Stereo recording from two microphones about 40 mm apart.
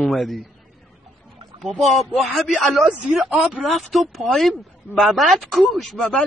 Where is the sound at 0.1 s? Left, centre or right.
Centre.